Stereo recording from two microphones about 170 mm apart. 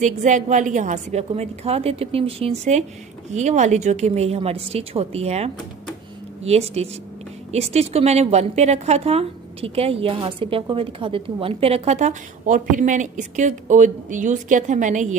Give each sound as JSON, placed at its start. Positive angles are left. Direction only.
{"t": 0.0, "sound": "a woman's voice", "side_deg": -45}